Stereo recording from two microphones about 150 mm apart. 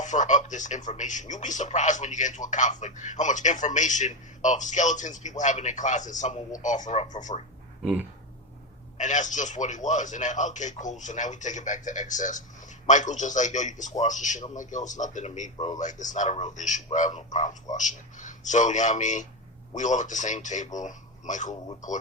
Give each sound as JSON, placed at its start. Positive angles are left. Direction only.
{"t": 0.0, "sound": "speech", "side_deg": 55}
{"t": 7.8, "sound": "a sound", "side_deg": -5}
{"t": 9.0, "sound": "speech", "side_deg": 55}